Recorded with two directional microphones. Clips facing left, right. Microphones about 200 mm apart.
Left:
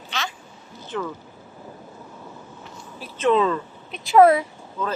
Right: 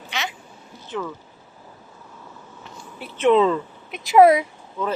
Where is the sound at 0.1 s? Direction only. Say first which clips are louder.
Right 1 dB; 10° right (ahead or behind).